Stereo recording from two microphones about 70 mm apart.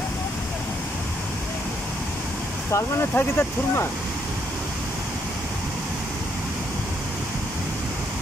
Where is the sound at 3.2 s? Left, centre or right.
Left.